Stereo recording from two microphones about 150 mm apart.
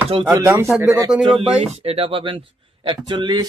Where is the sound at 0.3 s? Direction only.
20° right (ahead or behind).